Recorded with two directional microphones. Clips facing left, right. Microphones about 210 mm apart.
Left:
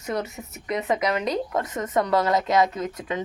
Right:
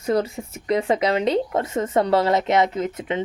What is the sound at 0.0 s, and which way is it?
Speech, 30° right (ahead or behind).